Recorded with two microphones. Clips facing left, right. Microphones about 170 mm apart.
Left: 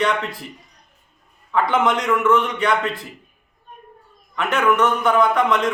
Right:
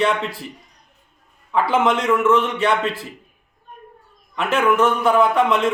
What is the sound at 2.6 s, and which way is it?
Speech, 25° right (ahead or behind).